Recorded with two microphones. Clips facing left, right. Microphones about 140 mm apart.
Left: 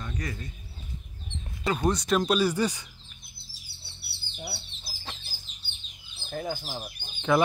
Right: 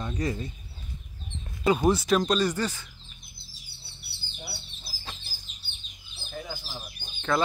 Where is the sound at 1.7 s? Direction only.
10° right (ahead or behind); by 2.8 s 10° left (ahead or behind).